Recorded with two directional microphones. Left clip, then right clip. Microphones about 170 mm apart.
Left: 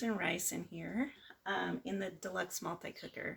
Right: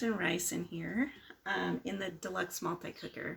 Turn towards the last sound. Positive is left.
turn(degrees=25)  # may be behind; listen again after turning